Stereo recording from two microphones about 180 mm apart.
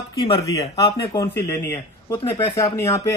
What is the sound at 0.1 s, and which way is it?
A man's voice, 20° left (ahead or behind).